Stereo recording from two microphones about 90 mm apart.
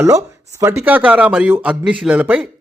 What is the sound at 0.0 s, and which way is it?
Speech, 35° right (ahead or behind).